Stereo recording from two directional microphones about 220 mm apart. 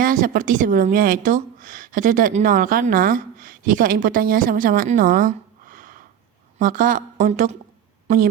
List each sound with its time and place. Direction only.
0.0 s a woman's voice: 40° right (ahead or behind)